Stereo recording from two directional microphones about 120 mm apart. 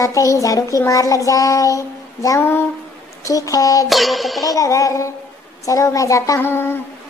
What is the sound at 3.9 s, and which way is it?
Music, centre (ahead or behind).